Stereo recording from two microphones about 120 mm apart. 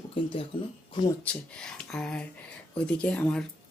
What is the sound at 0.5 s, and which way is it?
Speech, 45° left (ahead or behind).